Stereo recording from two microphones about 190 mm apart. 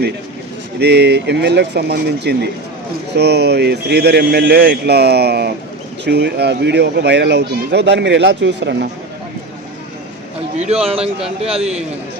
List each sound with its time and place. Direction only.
0.8 s speech: 60° right (ahead or behind)
10.6 s a man's voice: 35° right (ahead or behind)